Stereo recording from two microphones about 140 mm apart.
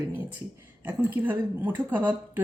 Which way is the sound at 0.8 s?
15° right (ahead or behind).